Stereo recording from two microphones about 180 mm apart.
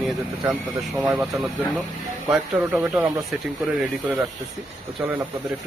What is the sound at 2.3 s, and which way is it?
Speech, 5° right (ahead or behind).